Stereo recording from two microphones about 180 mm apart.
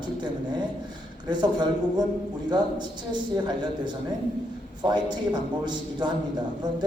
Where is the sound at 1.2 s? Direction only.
25° right (ahead or behind).